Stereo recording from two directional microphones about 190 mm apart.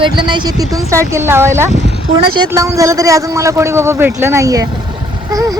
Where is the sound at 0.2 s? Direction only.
25° right (ahead or behind).